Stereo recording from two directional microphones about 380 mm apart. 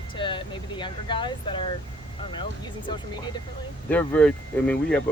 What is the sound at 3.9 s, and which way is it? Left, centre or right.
Speech, centre.